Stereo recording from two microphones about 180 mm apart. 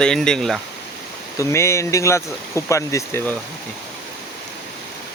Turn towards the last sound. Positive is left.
turn(degrees=15)  # may be behind; listen again after turning